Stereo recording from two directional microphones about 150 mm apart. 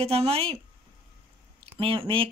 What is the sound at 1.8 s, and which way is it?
Speech, 35° right (ahead or behind).